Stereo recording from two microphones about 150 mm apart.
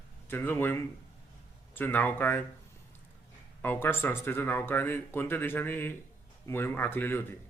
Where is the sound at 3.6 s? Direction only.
15° left (ahead or behind).